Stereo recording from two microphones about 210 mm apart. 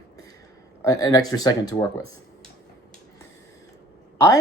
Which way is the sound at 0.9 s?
15° left (ahead or behind).